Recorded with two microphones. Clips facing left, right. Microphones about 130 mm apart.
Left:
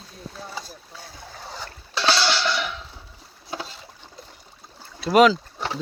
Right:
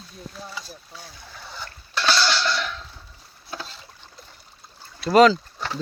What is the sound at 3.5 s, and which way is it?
Boat, 15° left (ahead or behind).